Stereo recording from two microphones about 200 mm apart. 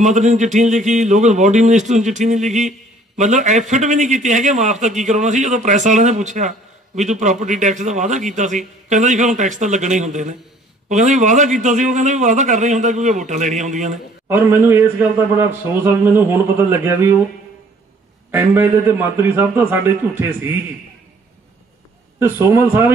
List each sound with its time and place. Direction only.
0.0 s a man's voice: 35° right (ahead or behind)
14.2 s a man's voice: 10° right (ahead or behind)
18.3 s a man's voice: 10° right (ahead or behind)
22.2 s a man's voice: 10° right (ahead or behind)